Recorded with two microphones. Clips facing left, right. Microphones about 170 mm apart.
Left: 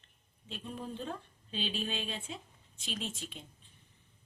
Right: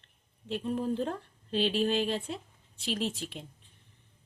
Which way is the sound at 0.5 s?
70° right (ahead or behind).